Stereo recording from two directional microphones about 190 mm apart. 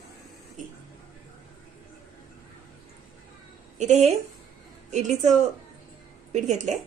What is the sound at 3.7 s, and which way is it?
A woman's voice, 35° right (ahead or behind).